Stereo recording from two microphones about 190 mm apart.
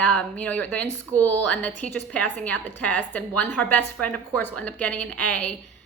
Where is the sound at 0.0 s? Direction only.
5° left (ahead or behind).